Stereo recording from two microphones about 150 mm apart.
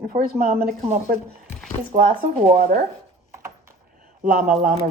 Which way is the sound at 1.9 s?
75° right (ahead or behind).